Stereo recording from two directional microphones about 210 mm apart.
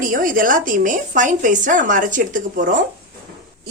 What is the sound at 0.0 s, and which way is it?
Speech, 40° right (ahead or behind).